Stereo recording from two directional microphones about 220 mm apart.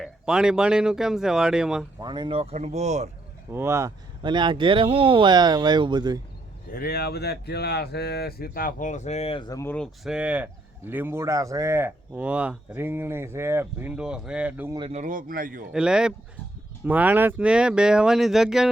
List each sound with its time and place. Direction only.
0.0 s speech: 5° right (ahead or behind)
2.0 s speech: 20° right (ahead or behind)
3.5 s speech: 10° right (ahead or behind)
6.7 s speech: 45° left (ahead or behind); by 14.8 s 10° right (ahead or behind)
14.8 s a man's voice: 30° right (ahead or behind)
15.7 s speech: 5° right (ahead or behind)